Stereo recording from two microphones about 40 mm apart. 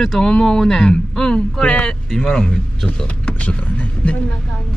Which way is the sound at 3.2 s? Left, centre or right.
Left.